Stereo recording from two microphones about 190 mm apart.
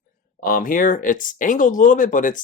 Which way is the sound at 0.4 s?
45° left (ahead or behind).